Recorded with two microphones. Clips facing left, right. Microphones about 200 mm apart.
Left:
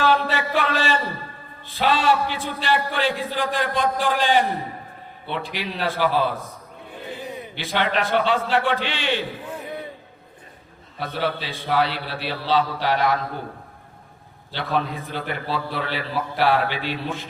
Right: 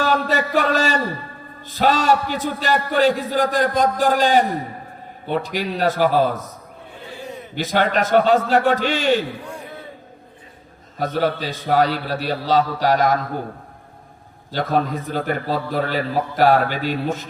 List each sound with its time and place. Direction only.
0.0 s a sound: 45° right (ahead or behind)
1.6 s a man's voice: 45° right (ahead or behind)
7.5 s a man's voice: 45° right (ahead or behind)
10.9 s a man's voice: 45° right (ahead or behind)
14.5 s a man's voice: 45° right (ahead or behind)